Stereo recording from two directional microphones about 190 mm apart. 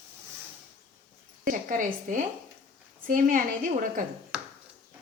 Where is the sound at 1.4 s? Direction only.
45° right (ahead or behind).